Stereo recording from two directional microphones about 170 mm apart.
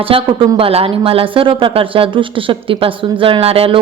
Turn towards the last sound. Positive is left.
turn(degrees=-35)  # may be behind; listen again after turning